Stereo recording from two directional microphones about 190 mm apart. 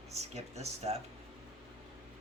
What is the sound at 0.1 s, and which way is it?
Speech, 35° right (ahead or behind).